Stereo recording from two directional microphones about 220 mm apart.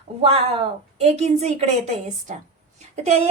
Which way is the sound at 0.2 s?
25° right (ahead or behind).